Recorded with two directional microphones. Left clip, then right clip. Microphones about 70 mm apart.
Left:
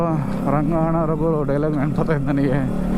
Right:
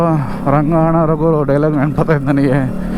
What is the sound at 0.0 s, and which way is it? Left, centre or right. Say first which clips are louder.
Speech: right 7 dB; right.